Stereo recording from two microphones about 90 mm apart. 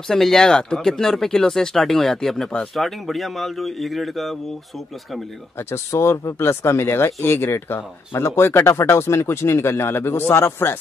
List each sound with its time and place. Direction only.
0.1 s speech: 5° left (ahead or behind)
5.7 s speech: 30° left (ahead or behind)